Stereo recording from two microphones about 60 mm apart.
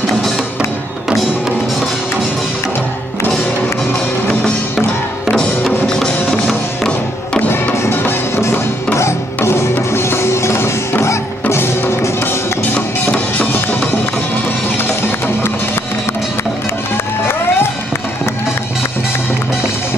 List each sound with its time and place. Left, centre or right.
5.9 s music: centre
7.9 s music: left
8.9 s music: left
12.7 s music: left
14.8 s music: left
16.9 s music: left